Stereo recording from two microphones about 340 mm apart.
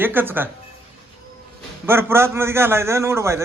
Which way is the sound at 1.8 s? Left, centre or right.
Centre.